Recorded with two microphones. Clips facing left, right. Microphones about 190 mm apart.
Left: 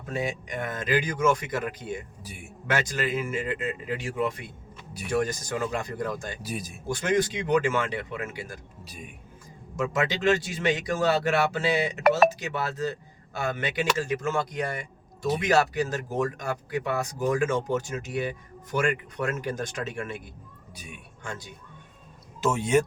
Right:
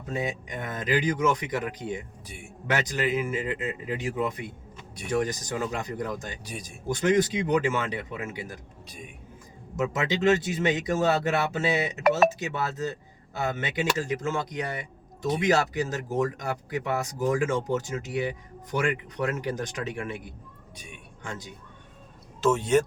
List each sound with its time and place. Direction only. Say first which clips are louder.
0.1 s speech: left 1 dB; 20° right (ahead or behind)
2.2 s speech: left 1 dB; 5° left (ahead or behind)
2.6 s speech: right 1 dB; 20° right (ahead or behind)
6.4 s speech: left 5 dB; 5° left (ahead or behind)
6.8 s speech: right 2 dB; 20° right (ahead or behind)
9.7 s speech: even; 20° right (ahead or behind)
20.7 s speech: left 2 dB; 5° left (ahead or behind)
21.2 s speech: even; 20° right (ahead or behind)
22.4 s speech: right 1 dB; 10° left (ahead or behind)